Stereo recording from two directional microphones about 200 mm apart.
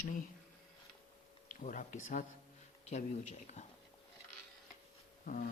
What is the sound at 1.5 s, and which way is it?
Speech, 40° left (ahead or behind).